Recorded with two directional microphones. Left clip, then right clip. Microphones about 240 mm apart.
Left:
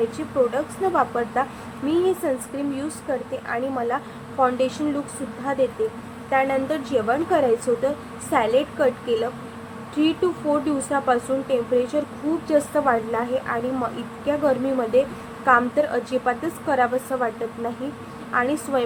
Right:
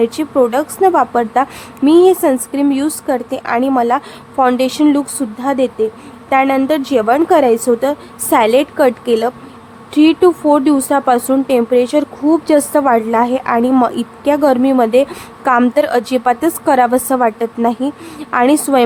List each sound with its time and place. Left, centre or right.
0.2 s a woman's voice: right